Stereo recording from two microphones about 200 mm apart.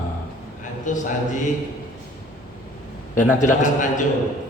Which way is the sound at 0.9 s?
40° left (ahead or behind).